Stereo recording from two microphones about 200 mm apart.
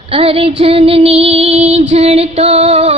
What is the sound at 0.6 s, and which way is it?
Female singing, 30° right (ahead or behind).